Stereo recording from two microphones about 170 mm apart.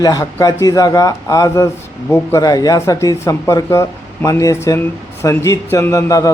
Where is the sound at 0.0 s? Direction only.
20° left (ahead or behind).